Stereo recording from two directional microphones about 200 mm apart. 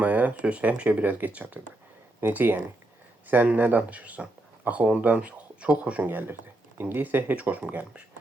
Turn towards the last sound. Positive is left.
turn(degrees=-5)  # may be behind; listen again after turning